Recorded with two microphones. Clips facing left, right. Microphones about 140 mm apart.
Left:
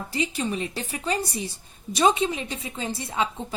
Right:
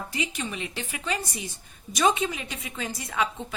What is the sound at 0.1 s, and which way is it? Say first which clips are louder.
A woman's voice: left 7 dB; 35° left (ahead or behind).